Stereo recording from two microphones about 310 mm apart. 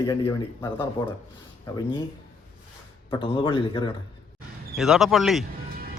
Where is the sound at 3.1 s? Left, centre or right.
Centre.